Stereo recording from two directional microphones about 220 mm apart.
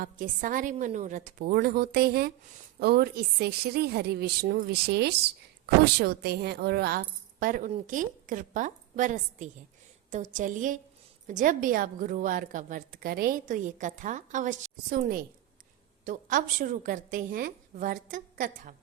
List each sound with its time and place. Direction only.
0.0 s a woman's voice: 40° right (ahead or behind)